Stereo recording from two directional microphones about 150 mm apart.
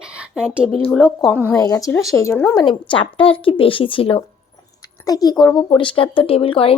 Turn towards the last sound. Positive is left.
turn(degrees=40)  # may be behind; listen again after turning